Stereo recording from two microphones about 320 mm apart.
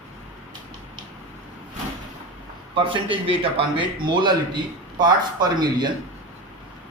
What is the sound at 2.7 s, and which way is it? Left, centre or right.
A man's voice, centre.